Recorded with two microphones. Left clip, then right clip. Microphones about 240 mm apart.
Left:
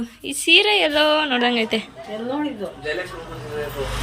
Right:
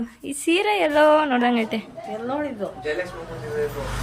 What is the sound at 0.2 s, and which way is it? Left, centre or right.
A woman's voice, centre.